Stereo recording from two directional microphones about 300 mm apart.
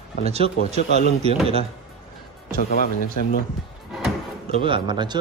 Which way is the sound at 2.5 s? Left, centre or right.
Left.